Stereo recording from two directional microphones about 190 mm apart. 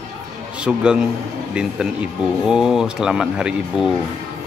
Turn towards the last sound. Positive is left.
turn(degrees=-5)  # may be behind; listen again after turning